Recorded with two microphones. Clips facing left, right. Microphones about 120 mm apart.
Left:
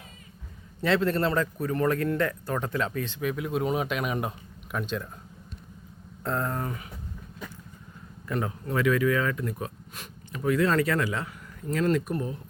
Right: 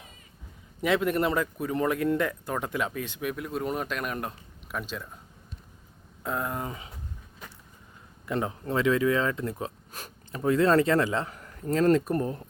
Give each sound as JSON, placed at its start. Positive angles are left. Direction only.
{"t": 0.8, "sound": "speech", "side_deg": -15}
{"t": 6.2, "sound": "speech", "side_deg": -10}
{"t": 8.3, "sound": "speech", "side_deg": -25}
{"t": 12.1, "sound": "speech", "side_deg": -45}